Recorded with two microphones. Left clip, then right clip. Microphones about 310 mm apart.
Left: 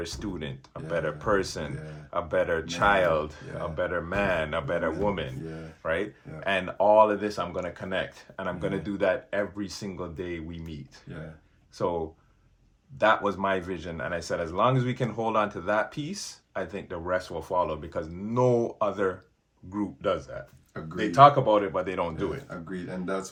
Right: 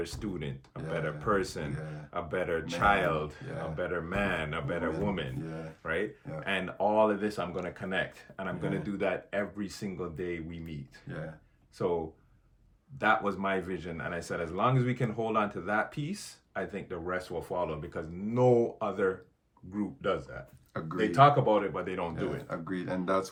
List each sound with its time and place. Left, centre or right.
0.0 s speech: centre
11.8 s speech: centre
13.0 s speech: centre